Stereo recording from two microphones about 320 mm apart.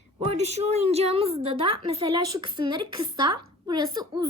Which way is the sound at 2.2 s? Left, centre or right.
Right.